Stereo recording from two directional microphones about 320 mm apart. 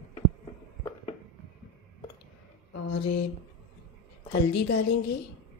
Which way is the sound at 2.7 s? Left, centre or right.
Left.